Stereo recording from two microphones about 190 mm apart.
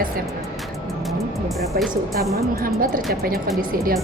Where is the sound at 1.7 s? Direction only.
50° right (ahead or behind).